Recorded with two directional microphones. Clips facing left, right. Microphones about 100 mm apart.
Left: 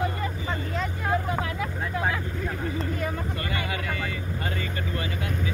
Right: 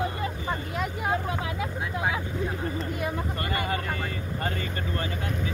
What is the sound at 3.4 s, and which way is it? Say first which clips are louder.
Vehicle: right 2 dB; 35° right (ahead or behind).